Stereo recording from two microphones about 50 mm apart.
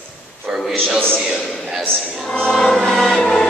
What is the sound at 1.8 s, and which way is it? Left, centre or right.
Choir, centre.